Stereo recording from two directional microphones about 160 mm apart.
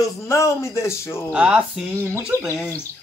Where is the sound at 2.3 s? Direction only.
15° left (ahead or behind).